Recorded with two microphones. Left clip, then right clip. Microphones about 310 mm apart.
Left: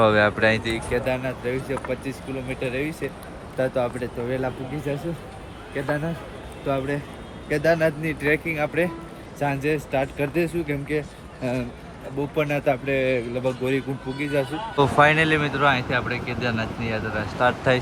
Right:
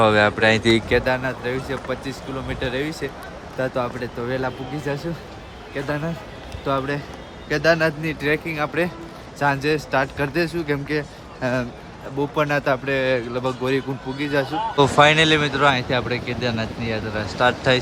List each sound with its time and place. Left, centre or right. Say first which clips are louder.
0.0 s speech: right 2 dB; centre
0.6 s speech: right 7 dB; right
1.0 s speech: right 3 dB; centre
12.4 s speech: right 2 dB; centre